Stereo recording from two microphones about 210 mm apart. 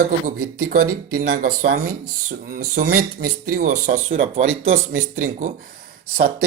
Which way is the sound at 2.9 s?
90° right.